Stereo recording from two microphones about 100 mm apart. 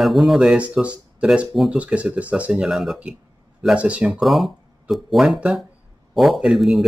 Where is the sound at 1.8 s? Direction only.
10° right (ahead or behind).